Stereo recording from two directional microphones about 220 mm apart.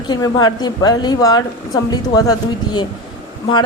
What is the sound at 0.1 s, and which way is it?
A woman's voice, 20° left (ahead or behind).